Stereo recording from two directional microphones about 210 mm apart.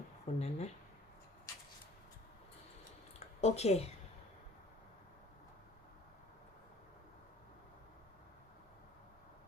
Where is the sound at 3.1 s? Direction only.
30° left (ahead or behind).